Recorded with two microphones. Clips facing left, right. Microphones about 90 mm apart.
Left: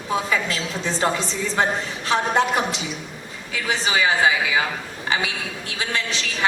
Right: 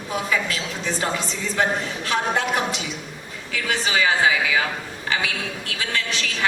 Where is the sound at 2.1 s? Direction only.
20° left (ahead or behind).